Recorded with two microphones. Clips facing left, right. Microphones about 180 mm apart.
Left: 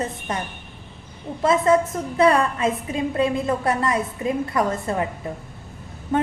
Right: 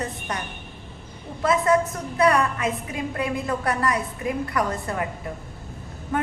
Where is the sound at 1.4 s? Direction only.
25° left (ahead or behind).